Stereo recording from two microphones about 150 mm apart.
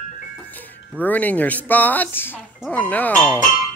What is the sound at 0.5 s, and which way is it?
Speech, 10° left (ahead or behind).